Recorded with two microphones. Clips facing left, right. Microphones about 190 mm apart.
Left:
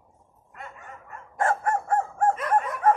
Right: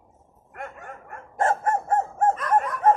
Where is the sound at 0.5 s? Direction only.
55° right (ahead or behind).